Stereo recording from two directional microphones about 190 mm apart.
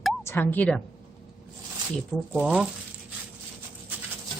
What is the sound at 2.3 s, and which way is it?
Speech, 5° right (ahead or behind).